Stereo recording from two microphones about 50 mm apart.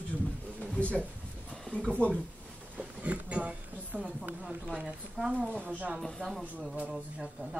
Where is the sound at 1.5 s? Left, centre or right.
Centre.